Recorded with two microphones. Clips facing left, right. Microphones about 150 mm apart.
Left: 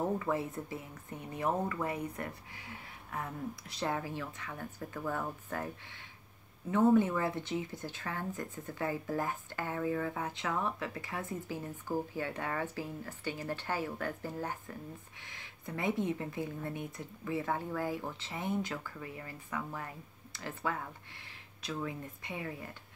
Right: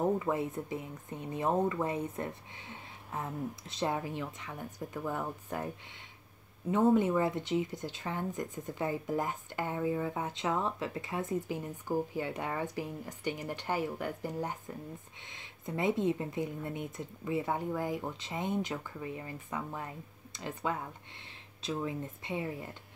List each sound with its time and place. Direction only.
0.2 s speech: 20° right (ahead or behind)
6.7 s speech: 20° right (ahead or behind)